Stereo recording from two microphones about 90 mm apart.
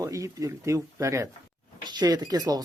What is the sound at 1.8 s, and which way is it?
Speech, 50° right (ahead or behind).